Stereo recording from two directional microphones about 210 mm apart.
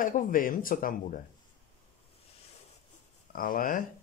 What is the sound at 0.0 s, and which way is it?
Speech, 40° left (ahead or behind).